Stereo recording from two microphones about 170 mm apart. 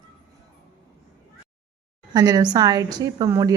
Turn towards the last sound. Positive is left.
turn(degrees=-20)  # may be behind; listen again after turning